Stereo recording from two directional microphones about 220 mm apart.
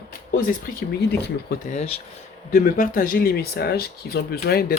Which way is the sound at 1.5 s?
30° left (ahead or behind).